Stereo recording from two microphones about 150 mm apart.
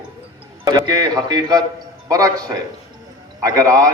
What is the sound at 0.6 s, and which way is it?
A man's voice, 25° right (ahead or behind).